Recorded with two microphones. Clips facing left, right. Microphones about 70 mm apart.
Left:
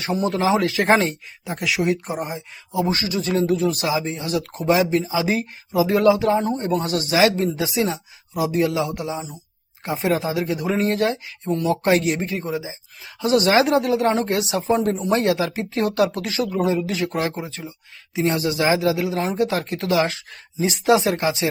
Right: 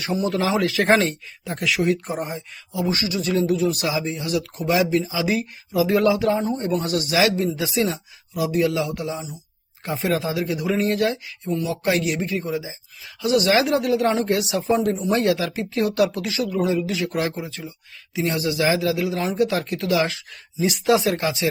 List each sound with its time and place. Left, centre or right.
0.0 s speech: left
0.9 s speech: centre
2.7 s speech: left
11.4 s speech: left
14.8 s speech: left
15.1 s speech: left